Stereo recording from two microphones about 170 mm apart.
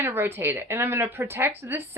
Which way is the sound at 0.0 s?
15° right (ahead or behind).